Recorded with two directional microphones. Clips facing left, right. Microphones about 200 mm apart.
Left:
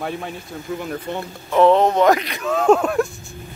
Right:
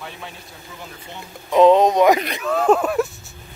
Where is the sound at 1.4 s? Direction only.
15° right (ahead or behind).